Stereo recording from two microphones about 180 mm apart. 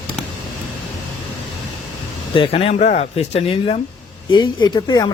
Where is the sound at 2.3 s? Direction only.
30° left (ahead or behind).